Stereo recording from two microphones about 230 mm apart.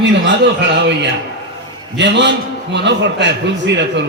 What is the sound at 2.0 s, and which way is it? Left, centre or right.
A man's voice, right.